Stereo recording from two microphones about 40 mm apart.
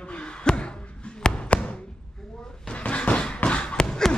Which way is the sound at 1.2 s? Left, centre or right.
Left.